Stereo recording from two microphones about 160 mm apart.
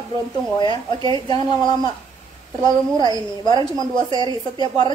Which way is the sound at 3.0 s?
25° left (ahead or behind).